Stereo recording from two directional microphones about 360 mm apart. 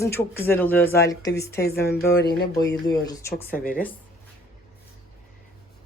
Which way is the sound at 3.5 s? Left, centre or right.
Left.